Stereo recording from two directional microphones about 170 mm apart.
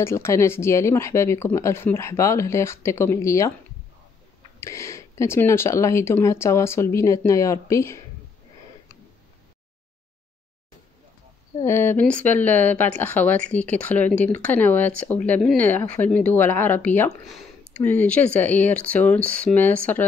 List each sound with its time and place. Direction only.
0.0 s speech: 15° left (ahead or behind)
4.6 s speech: 15° left (ahead or behind)
11.6 s speech: 15° left (ahead or behind)